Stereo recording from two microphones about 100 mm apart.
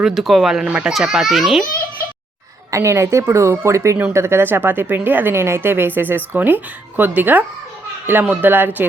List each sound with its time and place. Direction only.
0.0 s a child's voice: centre (ahead or behind)
2.6 s a woman's voice: 30° right (ahead or behind)